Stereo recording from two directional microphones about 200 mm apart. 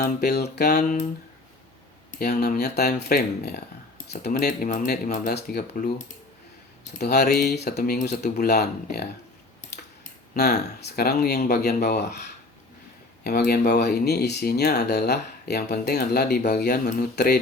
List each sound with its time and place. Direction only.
0.0 s speech: 55° left (ahead or behind)
2.1 s speech: 50° left (ahead or behind)
5.3 s speech: 50° left (ahead or behind)
7.0 s speech: 55° left (ahead or behind)
10.3 s speech: 55° left (ahead or behind)